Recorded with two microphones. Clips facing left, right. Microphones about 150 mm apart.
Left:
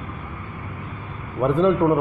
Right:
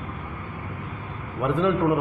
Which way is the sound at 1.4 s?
35° left (ahead or behind).